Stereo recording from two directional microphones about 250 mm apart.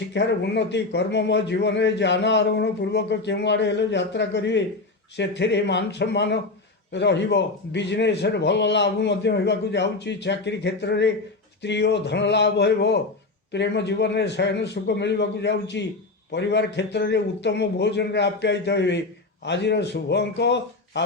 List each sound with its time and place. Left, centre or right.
0.1 s a man's voice: left